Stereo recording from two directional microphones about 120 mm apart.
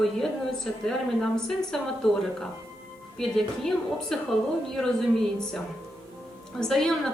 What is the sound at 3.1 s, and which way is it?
A woman's voice, 5° left (ahead or behind).